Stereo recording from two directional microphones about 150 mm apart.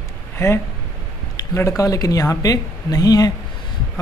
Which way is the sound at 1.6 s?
20° left (ahead or behind).